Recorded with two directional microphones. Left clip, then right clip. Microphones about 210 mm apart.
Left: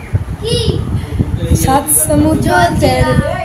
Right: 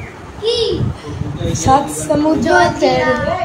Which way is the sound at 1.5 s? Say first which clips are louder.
Right 1 dB; 20° left (ahead or behind).